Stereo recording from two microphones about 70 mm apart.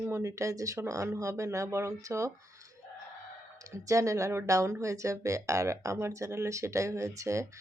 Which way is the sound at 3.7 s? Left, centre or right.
Right.